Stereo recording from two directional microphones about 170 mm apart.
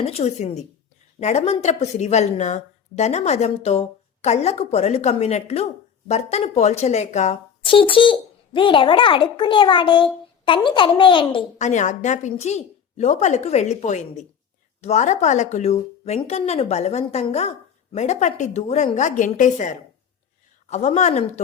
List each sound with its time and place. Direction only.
0.0 s a woman's voice: 35° left (ahead or behind)
7.6 s a child's voice: 30° left (ahead or behind)
11.5 s a woman's voice: 45° left (ahead or behind)